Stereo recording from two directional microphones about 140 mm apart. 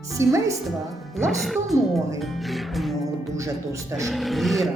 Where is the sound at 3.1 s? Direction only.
20° right (ahead or behind).